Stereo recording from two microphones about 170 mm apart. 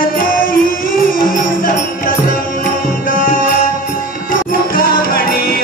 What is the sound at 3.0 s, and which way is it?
Music, 50° left (ahead or behind).